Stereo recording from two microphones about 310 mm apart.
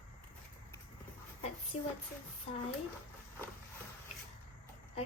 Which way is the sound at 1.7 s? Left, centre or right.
Centre.